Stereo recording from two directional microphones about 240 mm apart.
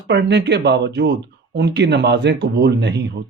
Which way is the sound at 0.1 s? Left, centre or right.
Right.